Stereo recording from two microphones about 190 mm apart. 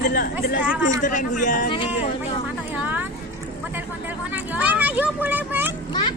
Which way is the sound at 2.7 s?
10° right (ahead or behind).